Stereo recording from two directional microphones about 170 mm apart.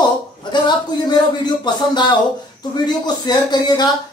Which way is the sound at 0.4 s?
25° left (ahead or behind).